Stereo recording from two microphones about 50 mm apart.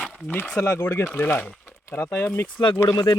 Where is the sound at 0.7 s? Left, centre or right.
Left.